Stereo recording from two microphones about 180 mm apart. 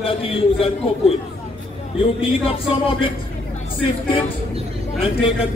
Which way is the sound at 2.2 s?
30° left (ahead or behind).